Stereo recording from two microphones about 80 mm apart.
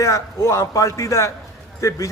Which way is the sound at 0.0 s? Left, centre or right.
Left.